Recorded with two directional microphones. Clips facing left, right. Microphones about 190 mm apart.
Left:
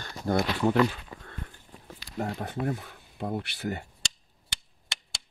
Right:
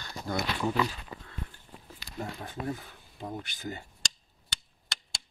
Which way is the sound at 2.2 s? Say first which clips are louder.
Left 5 dB; 60° left (ahead or behind).